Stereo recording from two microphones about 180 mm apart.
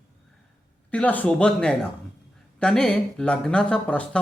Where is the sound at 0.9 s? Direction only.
10° left (ahead or behind).